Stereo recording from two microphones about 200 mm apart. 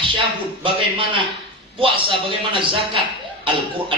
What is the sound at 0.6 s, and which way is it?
Speech, 25° right (ahead or behind).